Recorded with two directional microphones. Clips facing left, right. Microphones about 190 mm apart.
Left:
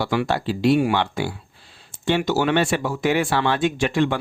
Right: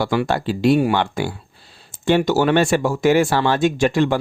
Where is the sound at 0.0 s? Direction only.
45° right (ahead or behind).